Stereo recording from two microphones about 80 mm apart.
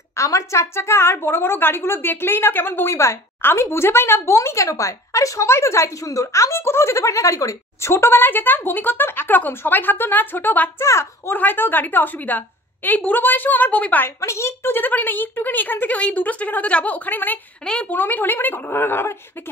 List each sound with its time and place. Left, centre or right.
0.1 s a woman's voice: left
10.8 s a woman's voice: left
11.3 s a woman's voice: left
14.2 s a woman's voice: left
17.6 s a woman's voice: centre
17.9 s a woman's voice: left